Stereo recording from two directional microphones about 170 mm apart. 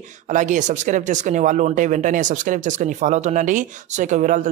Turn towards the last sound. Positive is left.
turn(degrees=-45)  # may be behind; listen again after turning